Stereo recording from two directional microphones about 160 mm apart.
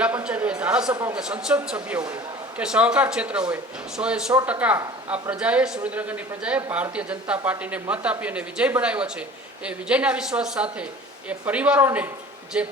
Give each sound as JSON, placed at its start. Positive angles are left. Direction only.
{"t": 0.0, "sound": "a man's voice", "side_deg": -10}